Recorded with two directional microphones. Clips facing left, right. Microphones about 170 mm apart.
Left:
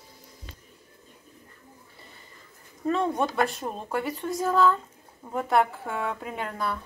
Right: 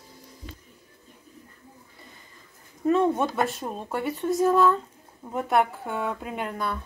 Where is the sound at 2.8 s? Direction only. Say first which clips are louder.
Right 4 dB; 5° right (ahead or behind).